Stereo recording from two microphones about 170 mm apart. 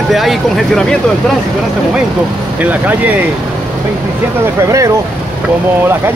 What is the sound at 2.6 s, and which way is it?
Speech, 10° right (ahead or behind).